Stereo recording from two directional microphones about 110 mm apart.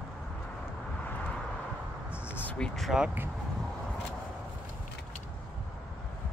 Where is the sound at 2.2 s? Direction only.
20° left (ahead or behind).